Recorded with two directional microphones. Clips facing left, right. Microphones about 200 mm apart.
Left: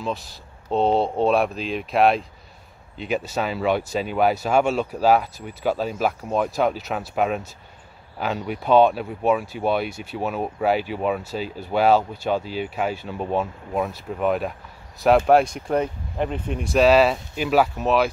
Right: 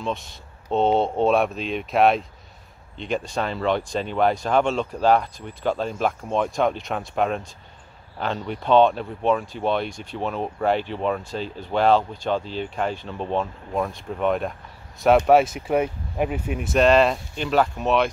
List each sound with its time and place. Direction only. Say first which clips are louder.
0.0 s speech: even; centre (ahead or behind)